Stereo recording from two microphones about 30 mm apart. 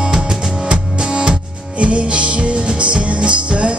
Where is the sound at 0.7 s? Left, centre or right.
Right.